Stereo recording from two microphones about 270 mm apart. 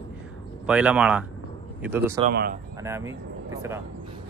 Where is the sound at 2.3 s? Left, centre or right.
Right.